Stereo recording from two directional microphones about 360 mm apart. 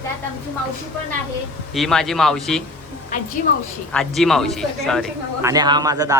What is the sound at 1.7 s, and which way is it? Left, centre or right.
Speech, centre.